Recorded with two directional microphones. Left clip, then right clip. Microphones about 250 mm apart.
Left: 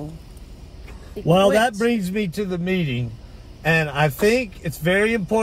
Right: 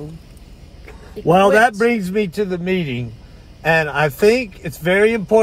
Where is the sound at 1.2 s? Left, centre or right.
Centre.